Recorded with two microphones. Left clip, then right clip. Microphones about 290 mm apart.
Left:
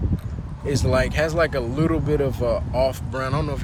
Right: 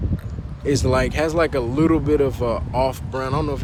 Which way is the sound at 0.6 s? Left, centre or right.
Right.